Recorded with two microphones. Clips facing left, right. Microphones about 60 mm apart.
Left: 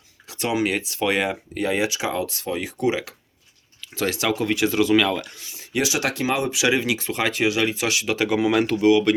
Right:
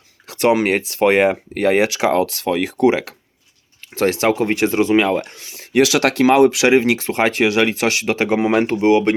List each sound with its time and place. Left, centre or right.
0.3 s speech: right
5.2 s speech: right
6.7 s speech: right